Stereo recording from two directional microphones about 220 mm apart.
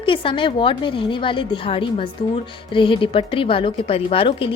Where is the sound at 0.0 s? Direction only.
25° left (ahead or behind).